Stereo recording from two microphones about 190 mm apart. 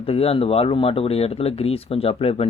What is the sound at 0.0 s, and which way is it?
Speech, 30° left (ahead or behind).